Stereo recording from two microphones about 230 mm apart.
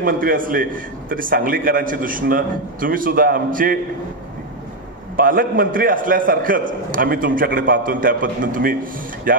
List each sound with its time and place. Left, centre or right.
0.0 s a man's voice: right
5.1 s a man's voice: right